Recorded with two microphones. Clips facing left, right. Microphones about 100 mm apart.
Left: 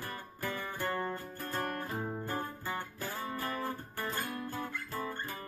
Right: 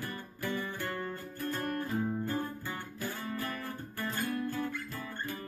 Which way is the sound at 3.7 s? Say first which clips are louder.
Even; 35° left (ahead or behind).